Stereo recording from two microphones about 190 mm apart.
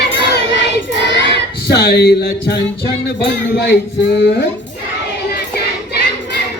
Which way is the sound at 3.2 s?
65° left (ahead or behind).